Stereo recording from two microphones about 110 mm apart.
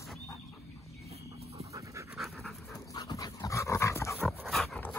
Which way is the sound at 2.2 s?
Centre (ahead or behind).